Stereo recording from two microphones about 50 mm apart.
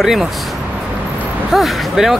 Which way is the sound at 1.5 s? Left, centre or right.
Centre.